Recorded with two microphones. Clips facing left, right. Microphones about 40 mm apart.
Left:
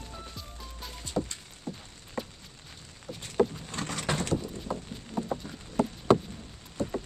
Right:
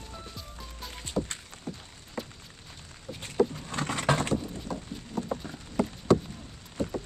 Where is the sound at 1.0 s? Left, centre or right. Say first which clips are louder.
Even; right.